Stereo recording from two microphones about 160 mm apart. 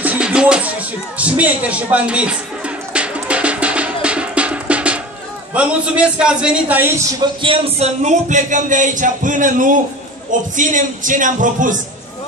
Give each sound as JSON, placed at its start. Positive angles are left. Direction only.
{"t": 0.0, "sound": "speech", "side_deg": -10}
{"t": 2.9, "sound": "music", "side_deg": -5}
{"t": 5.5, "sound": "a man's voice", "side_deg": -5}
{"t": 7.2, "sound": "speech", "side_deg": -35}